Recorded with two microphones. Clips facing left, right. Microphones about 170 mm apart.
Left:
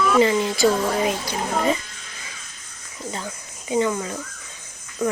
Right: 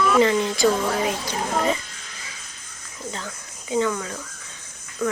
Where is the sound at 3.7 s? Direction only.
20° left (ahead or behind).